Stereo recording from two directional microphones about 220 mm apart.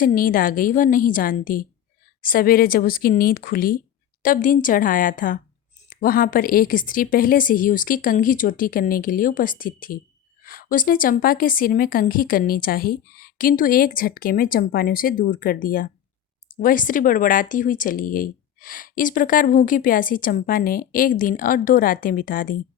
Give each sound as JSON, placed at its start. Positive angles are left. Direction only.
{"t": 0.0, "sound": "speech", "side_deg": 40}